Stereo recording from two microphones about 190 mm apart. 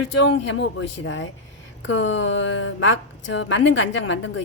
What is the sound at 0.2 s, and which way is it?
A woman's voice, 75° left (ahead or behind).